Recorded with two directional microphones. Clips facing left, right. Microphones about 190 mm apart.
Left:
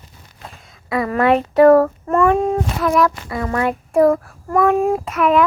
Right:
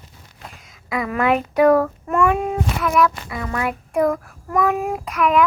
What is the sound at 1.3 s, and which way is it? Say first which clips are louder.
Child singing: left 5 dB; 35° left (ahead or behind).